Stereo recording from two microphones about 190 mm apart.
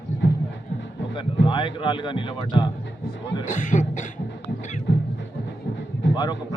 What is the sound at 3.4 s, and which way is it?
Speech, 40° left (ahead or behind).